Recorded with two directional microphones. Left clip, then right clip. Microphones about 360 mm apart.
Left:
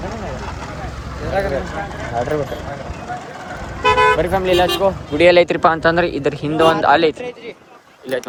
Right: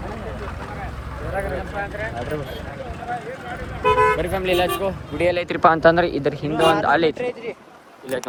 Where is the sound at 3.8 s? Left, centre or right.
Left.